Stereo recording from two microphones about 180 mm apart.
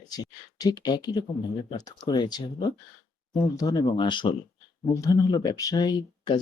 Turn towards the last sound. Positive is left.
turn(degrees=25)  # may be behind; listen again after turning